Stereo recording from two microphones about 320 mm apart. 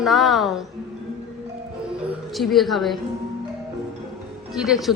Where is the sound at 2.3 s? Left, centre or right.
Centre.